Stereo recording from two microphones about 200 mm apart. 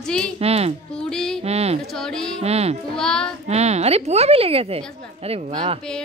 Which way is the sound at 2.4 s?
30° right (ahead or behind).